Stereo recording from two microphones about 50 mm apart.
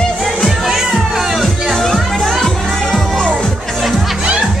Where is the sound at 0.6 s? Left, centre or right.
Centre.